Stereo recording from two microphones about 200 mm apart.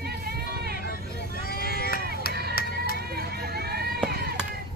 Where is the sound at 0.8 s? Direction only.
45° left (ahead or behind).